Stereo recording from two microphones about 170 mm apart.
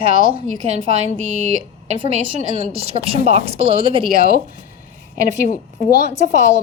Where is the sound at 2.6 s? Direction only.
35° right (ahead or behind).